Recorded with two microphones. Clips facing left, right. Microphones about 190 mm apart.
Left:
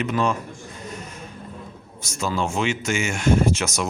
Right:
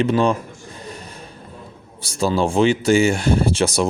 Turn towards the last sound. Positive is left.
turn(degrees=-30)  # may be behind; listen again after turning